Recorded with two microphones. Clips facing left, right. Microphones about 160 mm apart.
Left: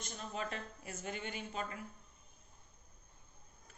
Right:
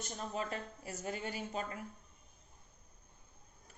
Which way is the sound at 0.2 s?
35° right (ahead or behind).